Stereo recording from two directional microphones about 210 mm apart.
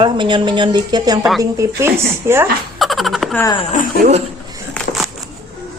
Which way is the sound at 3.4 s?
20° left (ahead or behind).